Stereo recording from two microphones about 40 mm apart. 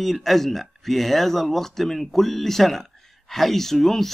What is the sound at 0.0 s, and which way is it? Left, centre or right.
Speech, centre.